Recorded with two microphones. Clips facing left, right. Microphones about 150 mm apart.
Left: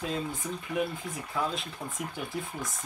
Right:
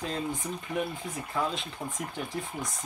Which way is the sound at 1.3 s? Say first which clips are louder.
Right 1 dB; centre (ahead or behind).